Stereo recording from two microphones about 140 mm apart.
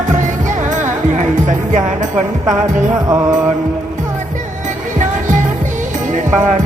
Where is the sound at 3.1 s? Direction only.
25° right (ahead or behind).